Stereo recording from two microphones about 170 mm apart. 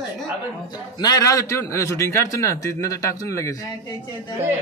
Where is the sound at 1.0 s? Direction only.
20° left (ahead or behind).